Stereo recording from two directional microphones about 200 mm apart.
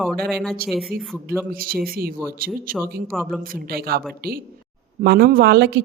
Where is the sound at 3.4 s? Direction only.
50° right (ahead or behind).